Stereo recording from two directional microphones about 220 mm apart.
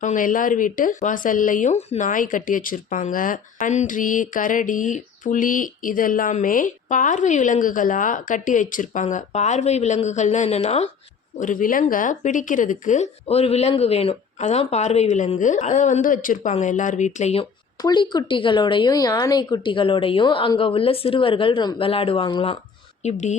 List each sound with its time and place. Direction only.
0.0 s speech: 35° left (ahead or behind)
17.8 s a woman's voice: 20° left (ahead or behind)
23.0 s speech: 30° left (ahead or behind)